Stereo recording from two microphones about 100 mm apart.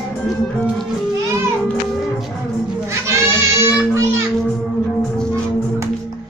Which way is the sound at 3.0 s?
30° right (ahead or behind).